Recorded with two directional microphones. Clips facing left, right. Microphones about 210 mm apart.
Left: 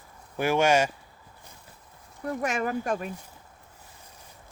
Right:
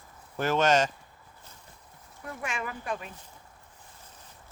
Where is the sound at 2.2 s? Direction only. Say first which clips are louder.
Left 8 dB; 40° left (ahead or behind).